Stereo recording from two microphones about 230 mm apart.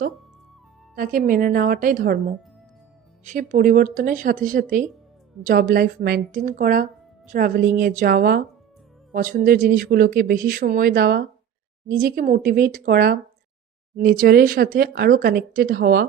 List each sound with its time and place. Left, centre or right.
0.9 s speech: right